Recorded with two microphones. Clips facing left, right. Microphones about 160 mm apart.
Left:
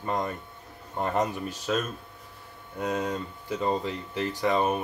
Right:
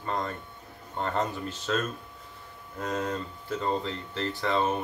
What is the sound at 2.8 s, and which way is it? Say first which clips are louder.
Speech: left 2 dB; 10° left (ahead or behind).